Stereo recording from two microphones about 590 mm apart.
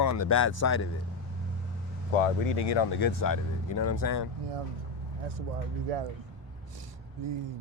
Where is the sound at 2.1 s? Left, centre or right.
Left.